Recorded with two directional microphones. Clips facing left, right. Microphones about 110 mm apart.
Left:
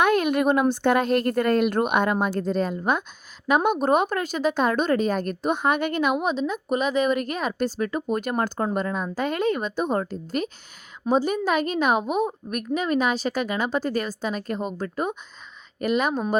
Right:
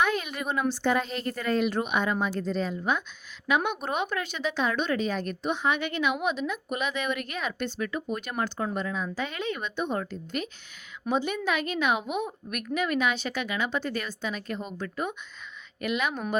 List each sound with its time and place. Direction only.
0.0 s a woman's voice: 55° left (ahead or behind); by 16.2 s 40° left (ahead or behind)